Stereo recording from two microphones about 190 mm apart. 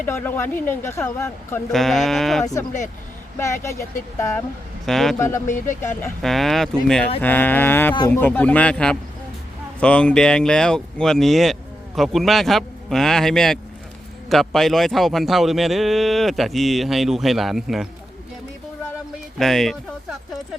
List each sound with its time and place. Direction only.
0.0 s speech: 10° left (ahead or behind)
1.7 s a man's voice: centre (ahead or behind)
2.4 s speech: 15° left (ahead or behind)
4.9 s a man's voice: centre (ahead or behind)
6.2 s a man's voice: centre (ahead or behind)
19.4 s speech: centre (ahead or behind)